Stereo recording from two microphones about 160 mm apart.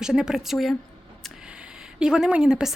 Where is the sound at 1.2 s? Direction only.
5° right (ahead or behind).